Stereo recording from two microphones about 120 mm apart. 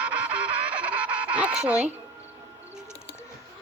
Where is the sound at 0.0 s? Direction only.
10° right (ahead or behind).